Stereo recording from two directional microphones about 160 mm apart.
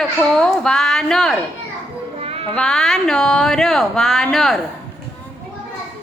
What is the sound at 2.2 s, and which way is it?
Music, 35° right (ahead or behind).